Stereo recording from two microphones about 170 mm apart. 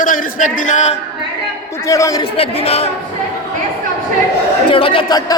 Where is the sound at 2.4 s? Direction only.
35° left (ahead or behind).